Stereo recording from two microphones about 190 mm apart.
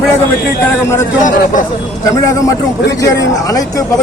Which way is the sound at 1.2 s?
45° left (ahead or behind).